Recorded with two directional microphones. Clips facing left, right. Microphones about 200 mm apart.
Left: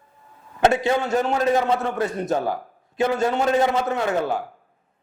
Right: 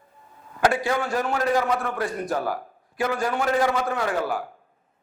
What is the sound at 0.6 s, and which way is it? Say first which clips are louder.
A man's voice: left 3 dB; 25° left (ahead or behind).